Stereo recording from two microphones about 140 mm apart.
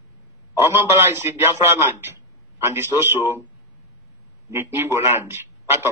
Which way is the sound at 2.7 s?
15° right (ahead or behind).